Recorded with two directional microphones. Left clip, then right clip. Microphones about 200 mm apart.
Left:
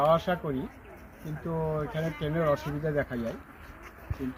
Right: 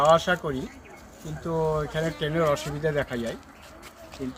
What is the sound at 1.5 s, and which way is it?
Speech, 10° right (ahead or behind).